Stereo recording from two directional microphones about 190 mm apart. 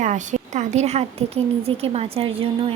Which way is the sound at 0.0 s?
40° right (ahead or behind).